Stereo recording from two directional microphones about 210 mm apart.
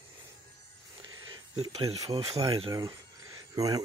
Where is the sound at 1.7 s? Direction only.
30° right (ahead or behind).